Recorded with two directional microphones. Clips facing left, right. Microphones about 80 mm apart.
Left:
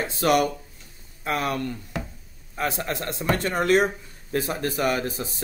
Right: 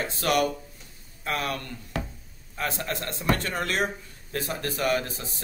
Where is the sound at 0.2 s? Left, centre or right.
Centre.